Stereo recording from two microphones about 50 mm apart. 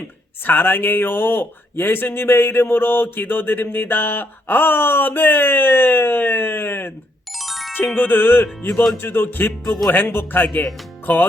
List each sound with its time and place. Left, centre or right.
0.4 s speech: left
7.3 s music: centre
7.9 s speech: left